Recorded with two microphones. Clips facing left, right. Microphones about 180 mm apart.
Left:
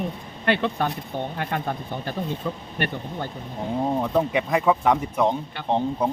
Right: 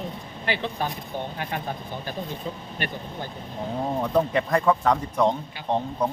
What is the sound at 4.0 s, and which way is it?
Speech, 5° left (ahead or behind).